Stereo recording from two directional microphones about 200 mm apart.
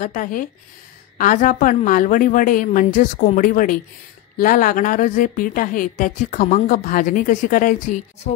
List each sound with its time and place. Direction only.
0.0 s a woman's voice: 40° left (ahead or behind)